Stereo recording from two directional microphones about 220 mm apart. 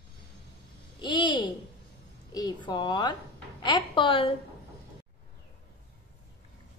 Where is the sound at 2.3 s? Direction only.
20° left (ahead or behind).